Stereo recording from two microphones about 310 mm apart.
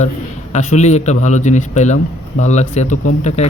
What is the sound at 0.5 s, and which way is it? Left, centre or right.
Speech, left.